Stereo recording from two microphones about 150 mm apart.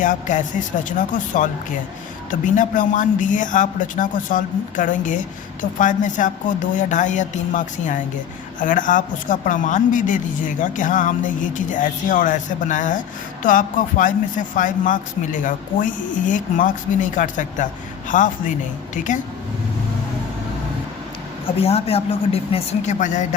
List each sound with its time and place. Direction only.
0.0 s speech: 60° left (ahead or behind)
21.4 s a man's voice: 40° left (ahead or behind)